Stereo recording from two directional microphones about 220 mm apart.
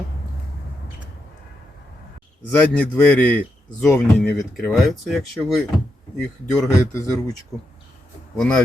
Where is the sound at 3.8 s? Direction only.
5° left (ahead or behind).